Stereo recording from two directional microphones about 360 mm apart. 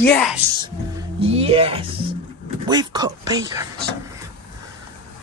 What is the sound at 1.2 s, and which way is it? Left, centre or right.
Speech, centre.